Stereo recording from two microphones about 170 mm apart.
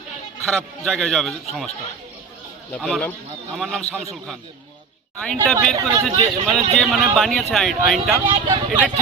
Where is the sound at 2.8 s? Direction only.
5° left (ahead or behind).